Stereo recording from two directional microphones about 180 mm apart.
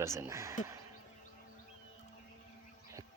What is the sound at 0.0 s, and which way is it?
Speech, 15° right (ahead or behind).